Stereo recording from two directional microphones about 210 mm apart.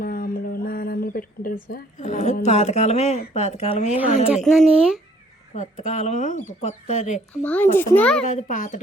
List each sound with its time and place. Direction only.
0.0 s speech: 45° left (ahead or behind)
4.5 s speech: centre (ahead or behind)
5.5 s speech: 35° left (ahead or behind)
7.4 s a child's voice: 10° left (ahead or behind)
8.3 s speech: 35° left (ahead or behind)